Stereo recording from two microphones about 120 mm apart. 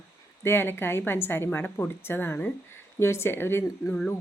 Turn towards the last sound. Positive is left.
turn(degrees=20)  # may be behind; listen again after turning